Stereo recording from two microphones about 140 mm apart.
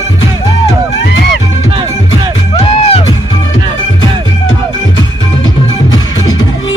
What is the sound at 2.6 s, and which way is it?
Music, 45° left (ahead or behind).